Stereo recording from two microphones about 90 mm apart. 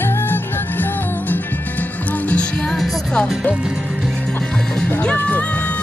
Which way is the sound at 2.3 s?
10° left (ahead or behind).